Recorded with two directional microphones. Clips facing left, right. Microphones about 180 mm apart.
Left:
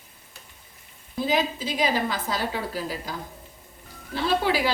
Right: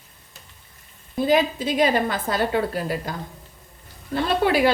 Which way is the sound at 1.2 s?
55° right (ahead or behind).